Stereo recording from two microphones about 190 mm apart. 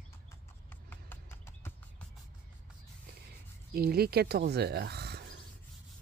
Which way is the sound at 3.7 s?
55° right (ahead or behind).